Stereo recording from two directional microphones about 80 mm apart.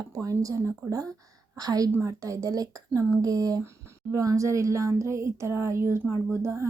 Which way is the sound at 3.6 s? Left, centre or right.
Right.